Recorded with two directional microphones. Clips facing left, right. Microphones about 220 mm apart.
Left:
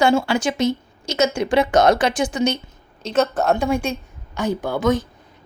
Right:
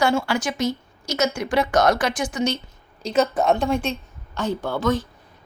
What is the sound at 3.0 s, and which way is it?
A woman's voice, centre (ahead or behind).